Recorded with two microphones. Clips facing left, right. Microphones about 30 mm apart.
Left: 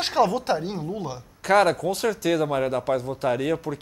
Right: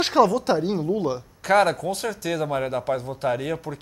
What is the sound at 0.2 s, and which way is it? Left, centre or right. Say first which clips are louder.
Speech: right 3 dB; right.